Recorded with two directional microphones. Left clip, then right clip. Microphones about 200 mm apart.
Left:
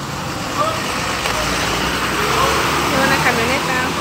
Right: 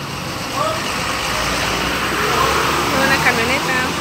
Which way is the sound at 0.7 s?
55° left (ahead or behind).